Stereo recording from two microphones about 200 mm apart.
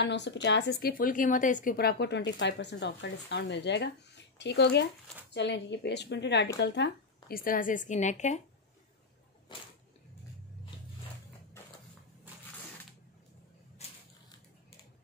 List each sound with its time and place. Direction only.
0.0 s a woman's voice: 60° left (ahead or behind); by 8.4 s 35° left (ahead or behind)
9.5 s whip: 25° left (ahead or behind)
13.8 s crushing: 35° left (ahead or behind)